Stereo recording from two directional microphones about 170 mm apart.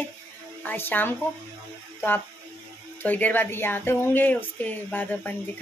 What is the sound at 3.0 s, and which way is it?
Speech, 10° left (ahead or behind).